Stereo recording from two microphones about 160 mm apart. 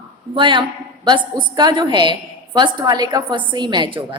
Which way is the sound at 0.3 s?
30° right (ahead or behind).